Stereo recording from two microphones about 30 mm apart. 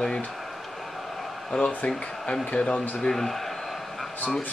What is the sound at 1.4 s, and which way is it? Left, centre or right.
Speech, left.